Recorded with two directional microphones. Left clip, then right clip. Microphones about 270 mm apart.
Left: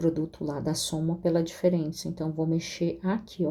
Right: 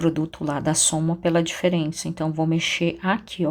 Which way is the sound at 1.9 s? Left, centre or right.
Right.